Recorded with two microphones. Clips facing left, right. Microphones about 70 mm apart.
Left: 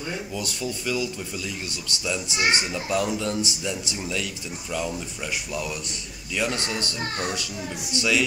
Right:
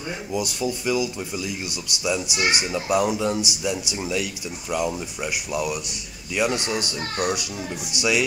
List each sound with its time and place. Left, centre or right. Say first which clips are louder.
0.3 s speech: right 5 dB; centre